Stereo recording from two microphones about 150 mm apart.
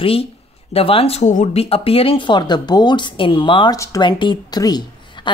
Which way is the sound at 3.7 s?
20° left (ahead or behind).